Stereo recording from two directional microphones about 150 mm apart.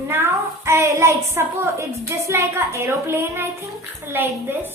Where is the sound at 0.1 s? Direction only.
15° right (ahead or behind).